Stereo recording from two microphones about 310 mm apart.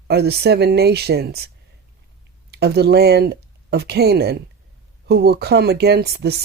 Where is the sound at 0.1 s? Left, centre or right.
Right.